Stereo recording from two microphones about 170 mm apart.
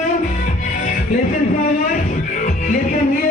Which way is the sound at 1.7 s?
55° left (ahead or behind).